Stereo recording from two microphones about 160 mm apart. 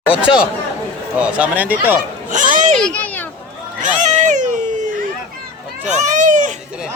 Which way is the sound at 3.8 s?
50° right (ahead or behind).